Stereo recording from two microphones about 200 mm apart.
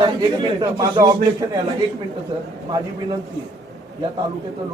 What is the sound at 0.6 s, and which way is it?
Speech, 20° right (ahead or behind).